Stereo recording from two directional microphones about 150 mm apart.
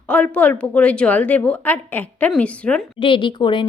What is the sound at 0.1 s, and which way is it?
A woman's voice, 10° left (ahead or behind).